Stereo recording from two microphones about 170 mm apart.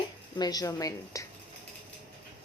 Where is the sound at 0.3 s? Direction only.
25° left (ahead or behind).